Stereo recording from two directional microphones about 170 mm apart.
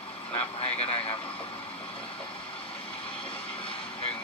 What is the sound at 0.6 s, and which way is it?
Speech, 35° left (ahead or behind).